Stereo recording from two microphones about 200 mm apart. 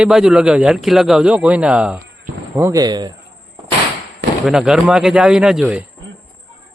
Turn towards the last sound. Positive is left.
turn(degrees=-5)  # may be behind; listen again after turning